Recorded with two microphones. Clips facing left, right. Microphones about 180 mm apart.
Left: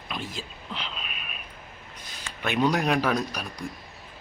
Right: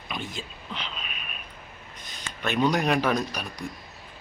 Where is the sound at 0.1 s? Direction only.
5° left (ahead or behind).